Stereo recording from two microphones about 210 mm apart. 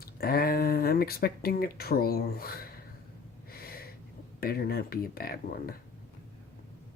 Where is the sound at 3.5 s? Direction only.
45° left (ahead or behind).